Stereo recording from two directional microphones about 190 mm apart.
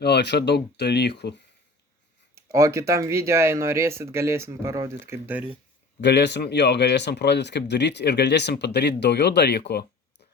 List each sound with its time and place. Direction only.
0.0 s speech: 60° left (ahead or behind)
2.3 s speech: 15° right (ahead or behind)
6.0 s speech: 65° left (ahead or behind)